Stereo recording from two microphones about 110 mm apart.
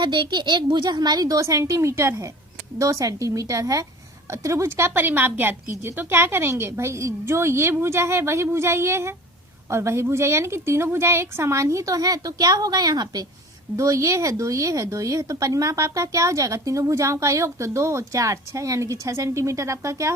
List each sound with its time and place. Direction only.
0.0 s speech: 45° right (ahead or behind); by 20.1 s 30° right (ahead or behind)